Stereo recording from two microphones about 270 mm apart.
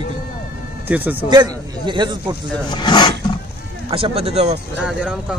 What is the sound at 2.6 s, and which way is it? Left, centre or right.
Speech, centre.